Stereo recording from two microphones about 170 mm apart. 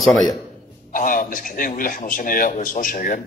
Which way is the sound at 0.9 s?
55° left (ahead or behind).